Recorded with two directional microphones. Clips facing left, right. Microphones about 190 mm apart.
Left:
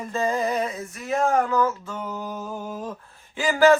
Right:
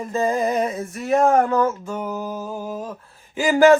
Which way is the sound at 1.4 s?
35° right (ahead or behind).